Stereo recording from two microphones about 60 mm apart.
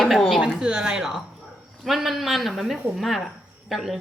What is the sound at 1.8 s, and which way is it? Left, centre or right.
Speech, centre.